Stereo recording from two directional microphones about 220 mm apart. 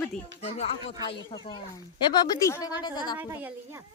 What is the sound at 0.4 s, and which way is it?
Speech, 30° left (ahead or behind).